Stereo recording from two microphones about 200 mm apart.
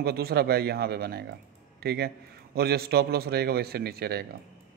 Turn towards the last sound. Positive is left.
turn(degrees=-50)  # may be behind; listen again after turning